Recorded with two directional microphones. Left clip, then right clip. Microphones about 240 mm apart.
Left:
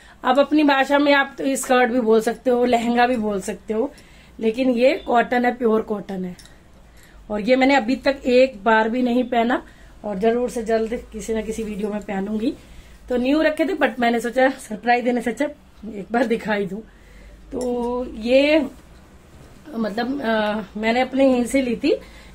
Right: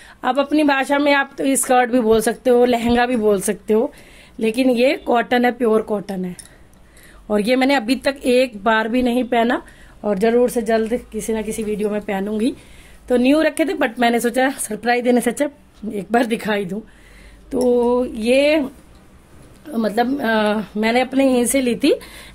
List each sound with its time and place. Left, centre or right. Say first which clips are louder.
0.2 s speech: even; right
7.2 s speech: right 1 dB; right
10.0 s a woman's voice: right 5 dB; right
19.7 s a woman's voice: right 6 dB; right